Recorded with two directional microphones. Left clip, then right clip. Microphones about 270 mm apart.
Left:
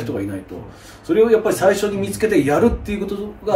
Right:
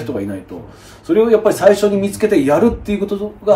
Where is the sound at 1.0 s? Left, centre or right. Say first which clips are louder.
Right 3 dB; centre.